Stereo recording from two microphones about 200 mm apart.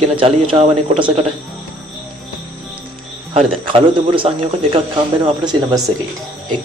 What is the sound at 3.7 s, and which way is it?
Speech, 25° right (ahead or behind).